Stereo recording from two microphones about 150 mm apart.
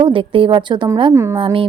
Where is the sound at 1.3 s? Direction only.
35° right (ahead or behind).